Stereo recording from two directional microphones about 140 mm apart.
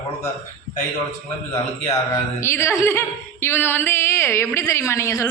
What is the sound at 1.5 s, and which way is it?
Speech, 20° left (ahead or behind).